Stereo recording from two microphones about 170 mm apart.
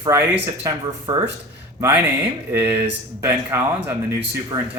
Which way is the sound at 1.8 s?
10° right (ahead or behind).